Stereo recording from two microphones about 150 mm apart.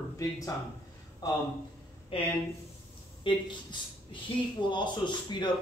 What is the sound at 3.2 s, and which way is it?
Speech, 30° left (ahead or behind).